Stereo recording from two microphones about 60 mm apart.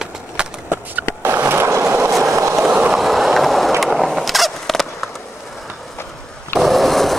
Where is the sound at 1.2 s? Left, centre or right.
Right.